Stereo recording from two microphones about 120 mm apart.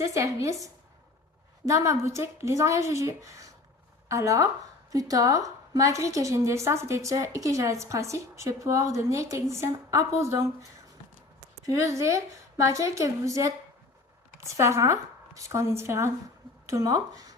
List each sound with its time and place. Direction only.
0.0 s a woman's voice: 25° right (ahead or behind)
11.6 s a woman's voice: 25° right (ahead or behind)